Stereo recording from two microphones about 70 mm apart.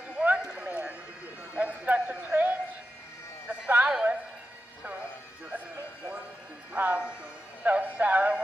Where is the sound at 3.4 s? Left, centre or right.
Right.